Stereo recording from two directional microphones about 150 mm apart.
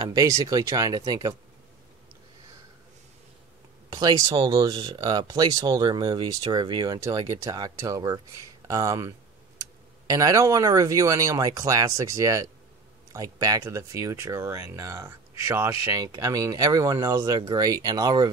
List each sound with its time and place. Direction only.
0.0 s speech: 25° right (ahead or behind)
3.9 s speech: 25° right (ahead or behind)